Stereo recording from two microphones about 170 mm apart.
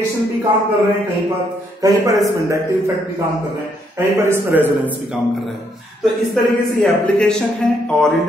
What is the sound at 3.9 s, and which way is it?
A man's voice, 15° right (ahead or behind).